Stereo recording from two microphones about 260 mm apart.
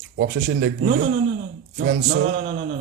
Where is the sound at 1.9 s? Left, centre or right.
Right.